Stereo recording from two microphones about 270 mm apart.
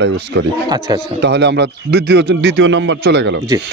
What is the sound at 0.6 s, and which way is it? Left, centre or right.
Speech, centre.